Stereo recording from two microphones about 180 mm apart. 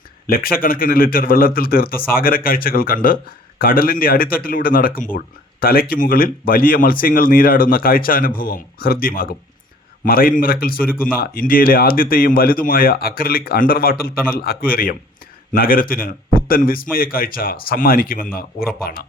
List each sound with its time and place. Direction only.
0.3 s a man's voice: 55° left (ahead or behind)